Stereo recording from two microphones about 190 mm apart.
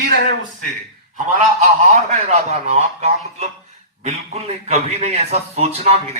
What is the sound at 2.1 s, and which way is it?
A man's voice, 35° right (ahead or behind).